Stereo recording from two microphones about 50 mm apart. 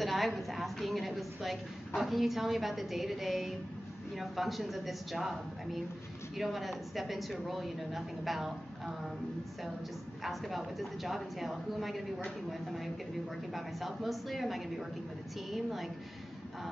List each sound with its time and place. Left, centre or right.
0.0 s speech: centre
10.2 s speech: centre